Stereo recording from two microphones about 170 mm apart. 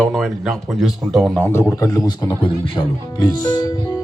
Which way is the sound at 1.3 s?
15° left (ahead or behind).